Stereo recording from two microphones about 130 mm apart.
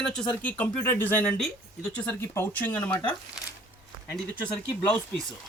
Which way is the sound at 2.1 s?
20° left (ahead or behind).